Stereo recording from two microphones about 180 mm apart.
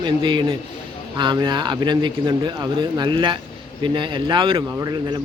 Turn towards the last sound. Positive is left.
turn(degrees=-20)  # may be behind; listen again after turning